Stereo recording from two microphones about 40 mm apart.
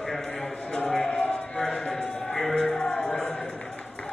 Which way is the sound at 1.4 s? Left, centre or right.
Left.